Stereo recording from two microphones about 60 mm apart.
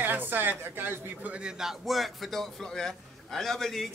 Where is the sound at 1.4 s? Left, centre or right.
Centre.